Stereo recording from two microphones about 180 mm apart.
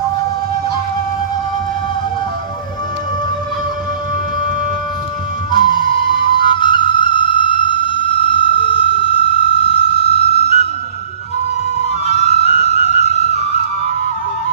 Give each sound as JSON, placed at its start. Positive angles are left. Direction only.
{"t": 5.5, "sound": "flute", "side_deg": 25}
{"t": 12.0, "sound": "music", "side_deg": 35}